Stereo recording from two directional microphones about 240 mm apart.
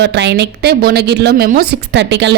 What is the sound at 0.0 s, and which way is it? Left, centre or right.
A woman's voice, right.